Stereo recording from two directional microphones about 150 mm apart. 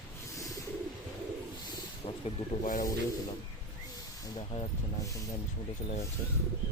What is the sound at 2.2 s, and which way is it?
Speech, 55° left (ahead or behind).